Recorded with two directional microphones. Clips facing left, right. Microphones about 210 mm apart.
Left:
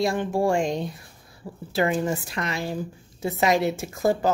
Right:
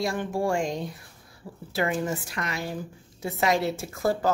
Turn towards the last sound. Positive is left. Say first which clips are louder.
# left 3 dB
turn(degrees=20)  # may be behind; listen again after turning